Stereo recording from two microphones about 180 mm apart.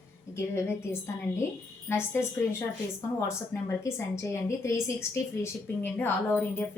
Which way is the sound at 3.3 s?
15° left (ahead or behind).